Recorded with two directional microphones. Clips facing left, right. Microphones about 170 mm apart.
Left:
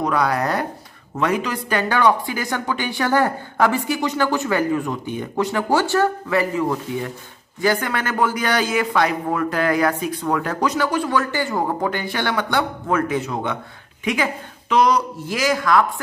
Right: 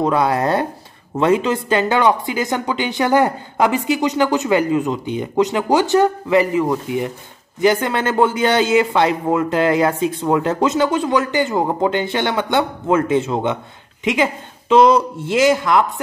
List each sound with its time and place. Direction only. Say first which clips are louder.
0.0 s speech: right 4 dB; 25° right (ahead or behind)